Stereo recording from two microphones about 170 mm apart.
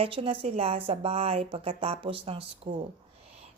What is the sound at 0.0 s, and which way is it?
Speech, 35° right (ahead or behind).